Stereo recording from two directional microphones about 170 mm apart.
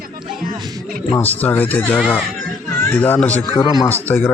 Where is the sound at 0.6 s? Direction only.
25° right (ahead or behind).